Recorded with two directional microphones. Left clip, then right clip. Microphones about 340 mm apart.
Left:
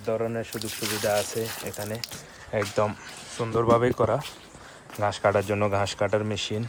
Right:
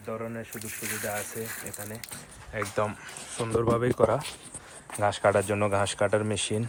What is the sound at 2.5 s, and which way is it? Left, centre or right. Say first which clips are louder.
Speech: left 4 dB; centre.